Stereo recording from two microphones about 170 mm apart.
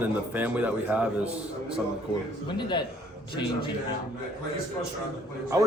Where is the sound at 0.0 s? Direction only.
10° right (ahead or behind).